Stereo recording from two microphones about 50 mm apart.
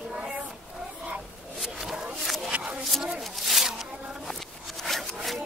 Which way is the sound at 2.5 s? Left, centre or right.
Right.